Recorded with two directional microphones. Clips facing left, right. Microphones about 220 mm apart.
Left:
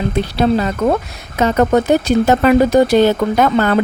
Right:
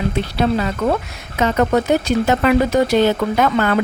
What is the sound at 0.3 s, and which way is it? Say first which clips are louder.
Speech: left 4 dB; 40° left (ahead or behind).